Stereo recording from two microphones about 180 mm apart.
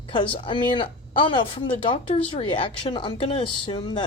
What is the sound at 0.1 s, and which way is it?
Speech, 25° left (ahead or behind).